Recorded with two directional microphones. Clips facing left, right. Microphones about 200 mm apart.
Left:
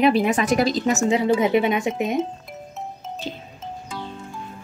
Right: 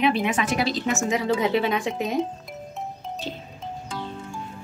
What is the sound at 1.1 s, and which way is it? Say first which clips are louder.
A woman's voice: left 4 dB; 30° left (ahead or behind).